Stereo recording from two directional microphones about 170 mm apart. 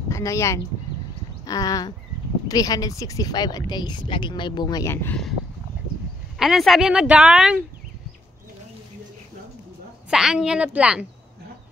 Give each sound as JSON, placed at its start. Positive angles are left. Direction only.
{"t": 0.1, "sound": "speech", "side_deg": 15}
{"t": 6.3, "sound": "speech", "side_deg": 0}
{"t": 10.0, "sound": "speech", "side_deg": -5}